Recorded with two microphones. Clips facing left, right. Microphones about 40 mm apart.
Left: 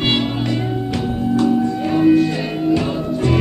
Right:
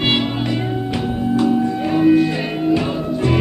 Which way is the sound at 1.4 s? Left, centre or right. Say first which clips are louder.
Even; centre.